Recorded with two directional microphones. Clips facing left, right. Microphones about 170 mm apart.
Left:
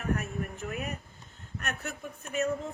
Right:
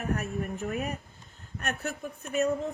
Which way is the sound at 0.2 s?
40° right (ahead or behind).